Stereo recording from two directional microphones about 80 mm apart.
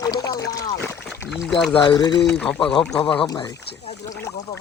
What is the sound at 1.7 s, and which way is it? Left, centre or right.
Speech, left.